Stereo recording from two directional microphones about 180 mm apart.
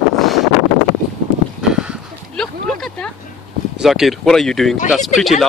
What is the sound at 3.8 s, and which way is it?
Speech, centre (ahead or behind).